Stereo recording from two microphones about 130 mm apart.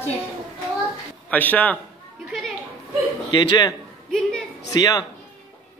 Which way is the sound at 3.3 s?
35° left (ahead or behind).